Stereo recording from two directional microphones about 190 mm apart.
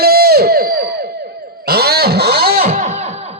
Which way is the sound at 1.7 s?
55° right (ahead or behind).